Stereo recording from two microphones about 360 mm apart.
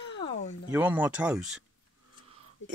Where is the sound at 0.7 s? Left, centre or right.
Centre.